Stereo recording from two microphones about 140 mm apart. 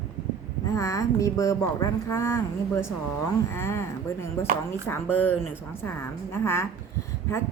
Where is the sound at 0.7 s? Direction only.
20° left (ahead or behind).